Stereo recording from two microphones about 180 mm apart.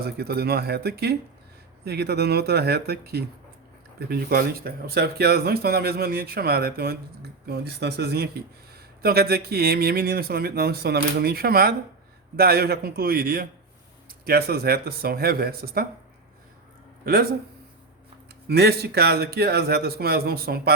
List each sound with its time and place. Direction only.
0.0 s speech: 60° right (ahead or behind)
17.1 s speech: 55° right (ahead or behind)
18.4 s speech: 65° right (ahead or behind)